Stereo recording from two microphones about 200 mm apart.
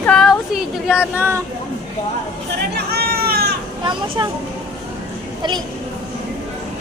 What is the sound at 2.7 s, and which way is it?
Goat, 50° right (ahead or behind).